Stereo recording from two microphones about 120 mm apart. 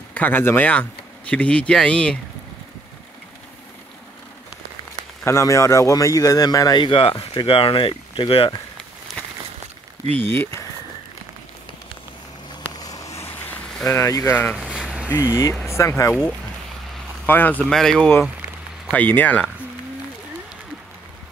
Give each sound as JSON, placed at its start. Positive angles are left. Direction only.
{"t": 0.1, "sound": "speech", "side_deg": 15}
{"t": 5.2, "sound": "speech", "side_deg": 25}
{"t": 10.1, "sound": "speech", "side_deg": 15}
{"t": 12.8, "sound": "a sound", "side_deg": 30}
{"t": 13.9, "sound": "speech", "side_deg": 25}
{"t": 14.5, "sound": "a sound", "side_deg": -5}
{"t": 15.7, "sound": "speech", "side_deg": 20}
{"t": 17.3, "sound": "speech", "side_deg": 15}
{"t": 18.9, "sound": "speech", "side_deg": 15}